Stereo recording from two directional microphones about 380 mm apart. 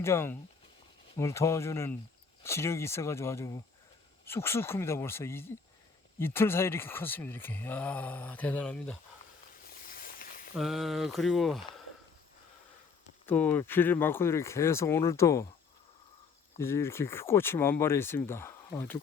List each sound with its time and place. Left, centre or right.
0.0 s speech: centre
9.8 s a sound: left
10.5 s speech: centre
13.2 s speech: centre
16.6 s speech: centre